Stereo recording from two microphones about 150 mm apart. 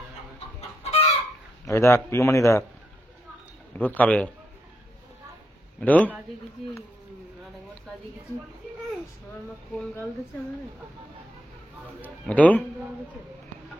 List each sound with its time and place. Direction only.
0.6 s chicken: 40° left (ahead or behind)
1.7 s speech: 20° left (ahead or behind)
3.7 s a man's voice: 10° left (ahead or behind)
5.8 s a man's voice: 10° left (ahead or behind)
9.7 s speech: 5° left (ahead or behind)
12.0 s a man's voice: 10° left (ahead or behind)